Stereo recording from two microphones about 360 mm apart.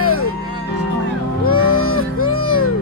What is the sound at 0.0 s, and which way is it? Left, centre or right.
Music, left.